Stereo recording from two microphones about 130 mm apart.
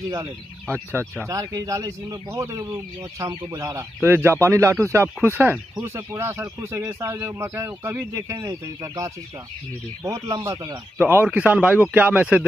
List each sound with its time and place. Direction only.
0.1 s speech: 25° right (ahead or behind)